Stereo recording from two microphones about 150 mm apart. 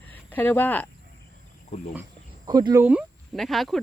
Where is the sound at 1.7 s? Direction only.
50° left (ahead or behind).